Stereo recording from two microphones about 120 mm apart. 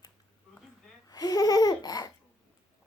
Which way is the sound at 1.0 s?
30° left (ahead or behind).